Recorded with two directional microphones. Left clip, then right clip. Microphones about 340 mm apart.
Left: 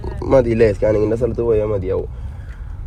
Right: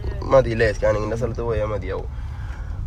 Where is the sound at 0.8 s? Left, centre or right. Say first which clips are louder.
Left 5 dB; left.